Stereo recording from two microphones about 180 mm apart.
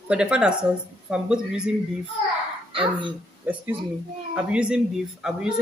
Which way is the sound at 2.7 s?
25° right (ahead or behind).